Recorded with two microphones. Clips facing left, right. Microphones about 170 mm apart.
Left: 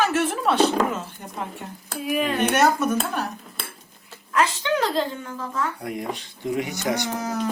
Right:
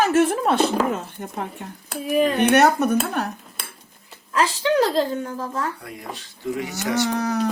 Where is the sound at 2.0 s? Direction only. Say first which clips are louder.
Right 5 dB; 40° right (ahead or behind).